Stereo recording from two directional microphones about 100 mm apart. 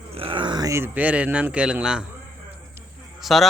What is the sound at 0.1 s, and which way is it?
Groan, 65° right (ahead or behind).